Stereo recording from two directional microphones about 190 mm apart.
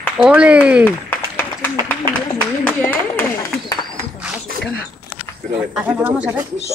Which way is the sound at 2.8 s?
10° left (ahead or behind).